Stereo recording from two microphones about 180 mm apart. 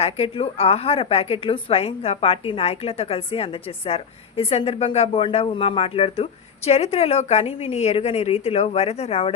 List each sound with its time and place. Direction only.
0.0 s a woman's voice: 30° left (ahead or behind)